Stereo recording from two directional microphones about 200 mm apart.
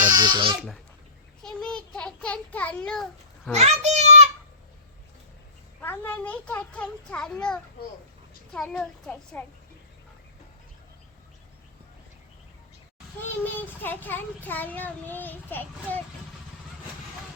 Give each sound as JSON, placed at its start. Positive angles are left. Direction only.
{"t": 0.1, "sound": "a sound", "side_deg": -20}
{"t": 1.4, "sound": "a child's voice", "side_deg": 5}
{"t": 3.5, "sound": "a child's voice", "side_deg": -35}
{"t": 5.8, "sound": "a child's voice", "side_deg": 10}
{"t": 13.4, "sound": "a child's voice", "side_deg": 10}